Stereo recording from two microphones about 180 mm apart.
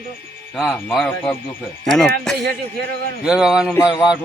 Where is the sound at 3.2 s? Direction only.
5° right (ahead or behind).